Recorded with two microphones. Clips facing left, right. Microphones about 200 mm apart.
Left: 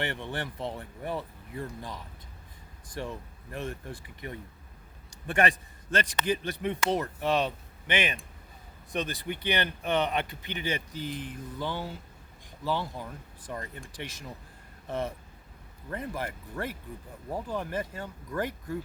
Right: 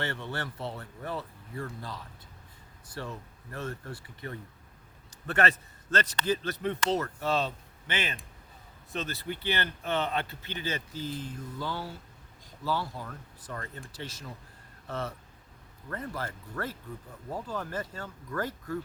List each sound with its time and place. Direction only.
0.0 s speech: 15° left (ahead or behind)